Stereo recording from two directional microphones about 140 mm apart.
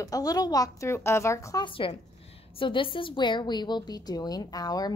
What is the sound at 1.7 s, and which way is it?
A woman's voice, 40° left (ahead or behind).